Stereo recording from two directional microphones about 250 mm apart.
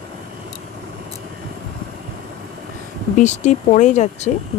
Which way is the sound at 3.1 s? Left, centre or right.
Left.